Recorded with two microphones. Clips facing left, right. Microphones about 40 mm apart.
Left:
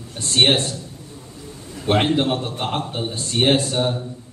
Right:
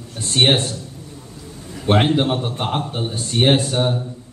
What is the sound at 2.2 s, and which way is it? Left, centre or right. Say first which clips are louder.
Speech: right 1 dB; right.